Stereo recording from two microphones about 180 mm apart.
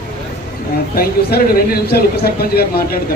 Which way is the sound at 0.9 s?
55° left (ahead or behind).